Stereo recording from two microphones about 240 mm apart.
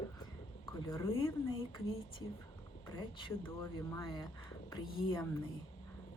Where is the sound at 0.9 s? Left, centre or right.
Centre.